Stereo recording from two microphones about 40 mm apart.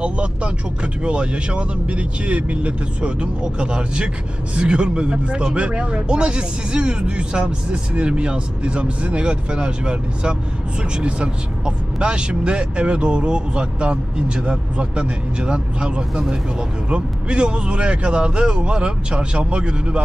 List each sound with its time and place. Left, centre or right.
0.0 s vehicle: right
1.0 s speech: right